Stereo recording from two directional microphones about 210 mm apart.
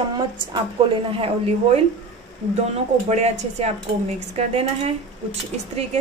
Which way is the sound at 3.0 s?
30° right (ahead or behind).